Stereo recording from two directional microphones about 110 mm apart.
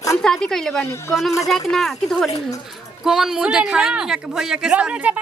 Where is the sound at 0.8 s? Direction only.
25° left (ahead or behind).